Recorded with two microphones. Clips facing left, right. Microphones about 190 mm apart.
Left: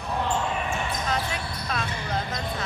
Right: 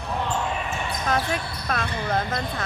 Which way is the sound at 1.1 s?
50° right (ahead or behind).